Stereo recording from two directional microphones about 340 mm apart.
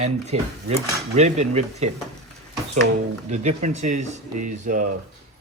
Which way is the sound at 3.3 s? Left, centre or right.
Right.